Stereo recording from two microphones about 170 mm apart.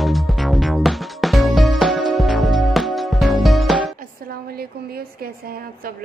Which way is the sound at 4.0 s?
60° right (ahead or behind).